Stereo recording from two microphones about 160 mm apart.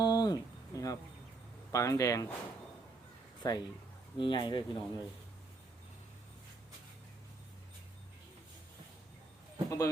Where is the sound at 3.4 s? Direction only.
25° left (ahead or behind).